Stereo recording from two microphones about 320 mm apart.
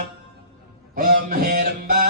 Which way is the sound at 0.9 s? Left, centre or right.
Right.